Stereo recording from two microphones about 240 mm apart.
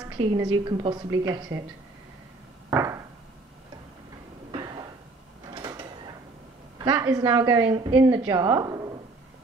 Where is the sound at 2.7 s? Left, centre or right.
Centre.